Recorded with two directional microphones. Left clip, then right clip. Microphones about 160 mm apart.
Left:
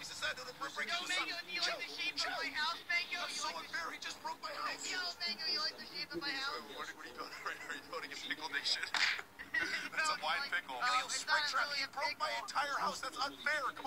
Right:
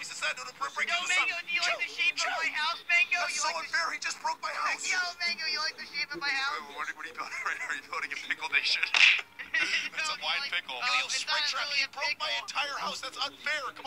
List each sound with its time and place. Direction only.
0.2 s speech: 25° right (ahead or behind); by 7.7 s 45° right (ahead or behind)
7.9 s speech: 35° right (ahead or behind); by 13.7 s 10° right (ahead or behind)